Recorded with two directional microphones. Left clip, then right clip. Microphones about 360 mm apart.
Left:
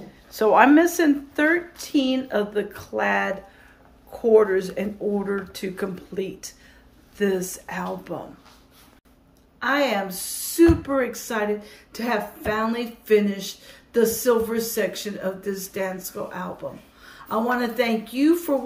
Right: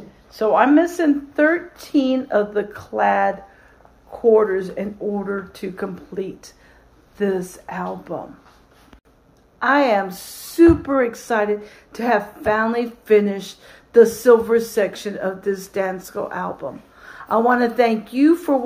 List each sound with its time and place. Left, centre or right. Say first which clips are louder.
0.3 s speech: even; centre
9.6 s speech: right 6 dB; centre